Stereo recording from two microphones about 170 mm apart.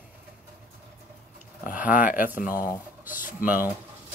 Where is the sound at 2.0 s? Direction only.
55° left (ahead or behind).